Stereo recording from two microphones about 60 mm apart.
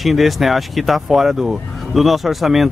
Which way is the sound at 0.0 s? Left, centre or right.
Centre.